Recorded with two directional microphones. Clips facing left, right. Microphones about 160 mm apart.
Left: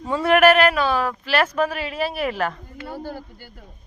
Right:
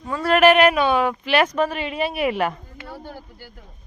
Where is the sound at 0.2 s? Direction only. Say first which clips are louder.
Left 1 dB; 10° left (ahead or behind).